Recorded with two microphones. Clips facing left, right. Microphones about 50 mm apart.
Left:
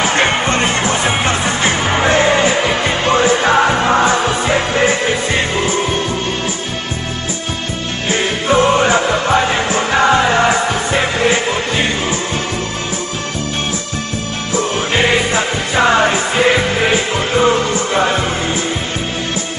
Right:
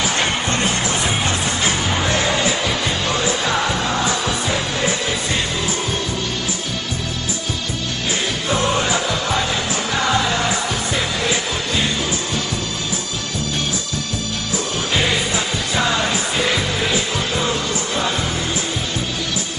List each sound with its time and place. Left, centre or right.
0.0 s music: left
8.1 s music: left
14.5 s music: left